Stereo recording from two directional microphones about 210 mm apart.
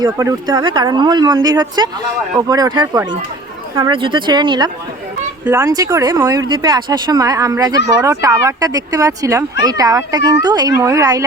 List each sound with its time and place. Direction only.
0.0 s speech: 15° right (ahead or behind)